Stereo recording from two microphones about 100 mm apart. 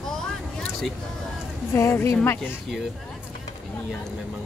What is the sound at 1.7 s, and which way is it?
Speech, 25° left (ahead or behind).